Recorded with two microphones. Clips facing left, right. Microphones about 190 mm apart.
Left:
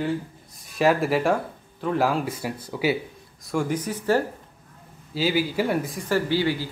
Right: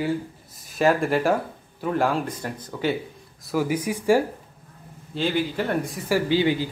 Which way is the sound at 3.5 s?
5° right (ahead or behind).